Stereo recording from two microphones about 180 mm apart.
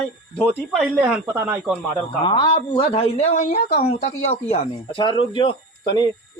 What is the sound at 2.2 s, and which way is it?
Speech, 25° left (ahead or behind).